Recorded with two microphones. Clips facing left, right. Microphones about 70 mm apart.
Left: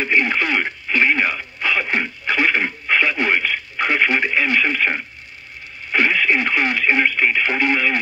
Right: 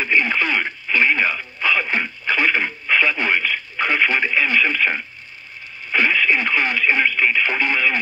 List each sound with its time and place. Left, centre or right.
0.0 s radio: left
0.9 s throat clearing: left
5.9 s radio: left
6.9 s radio: left
7.4 s radio: left